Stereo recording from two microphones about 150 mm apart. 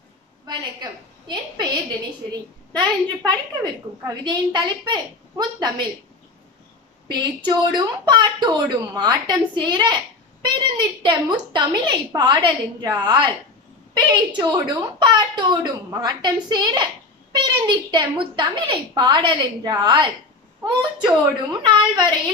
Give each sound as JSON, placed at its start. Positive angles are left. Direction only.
{"t": 1.2, "sound": "a woman's voice", "side_deg": -30}
{"t": 3.3, "sound": "a woman's voice", "side_deg": -25}
{"t": 7.1, "sound": "a woman's voice", "side_deg": -30}